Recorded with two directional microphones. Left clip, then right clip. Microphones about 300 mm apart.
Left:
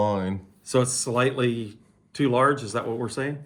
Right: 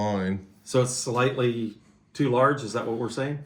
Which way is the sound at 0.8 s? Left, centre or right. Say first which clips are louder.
Left 1 dB; left.